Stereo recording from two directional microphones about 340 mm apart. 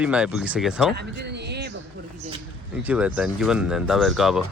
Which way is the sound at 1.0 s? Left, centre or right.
Right.